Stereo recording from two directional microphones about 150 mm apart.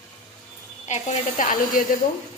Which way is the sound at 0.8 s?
50° left (ahead or behind).